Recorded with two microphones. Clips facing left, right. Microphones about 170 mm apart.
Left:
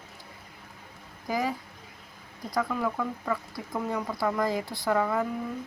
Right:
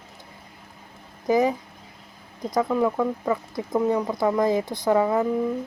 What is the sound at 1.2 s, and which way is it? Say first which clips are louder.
Speech: right 9 dB; 20° right (ahead or behind).